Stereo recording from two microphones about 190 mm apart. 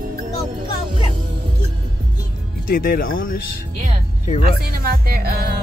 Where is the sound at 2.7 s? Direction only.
50° left (ahead or behind).